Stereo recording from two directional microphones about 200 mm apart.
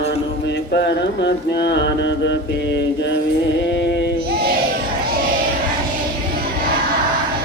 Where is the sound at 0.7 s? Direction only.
60° left (ahead or behind).